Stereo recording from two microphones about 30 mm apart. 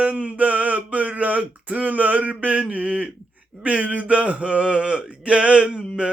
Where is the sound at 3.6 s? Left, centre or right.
Right.